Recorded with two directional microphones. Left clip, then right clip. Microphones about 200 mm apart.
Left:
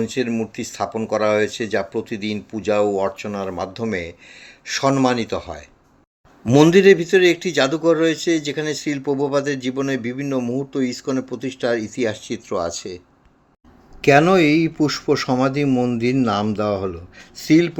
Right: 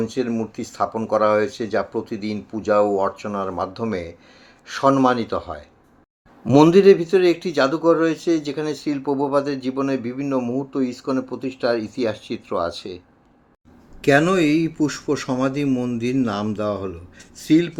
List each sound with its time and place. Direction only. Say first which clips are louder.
0.0 s a man's voice: left 1 dB; 30° left (ahead or behind)
14.0 s a man's voice: left 3 dB; 20° left (ahead or behind)